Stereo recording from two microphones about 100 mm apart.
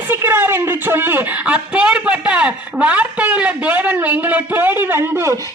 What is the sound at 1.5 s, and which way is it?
A man's voice, 10° right (ahead or behind).